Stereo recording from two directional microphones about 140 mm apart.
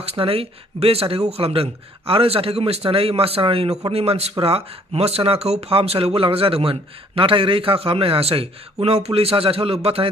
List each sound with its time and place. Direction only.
0.0 s speech: 45° right (ahead or behind)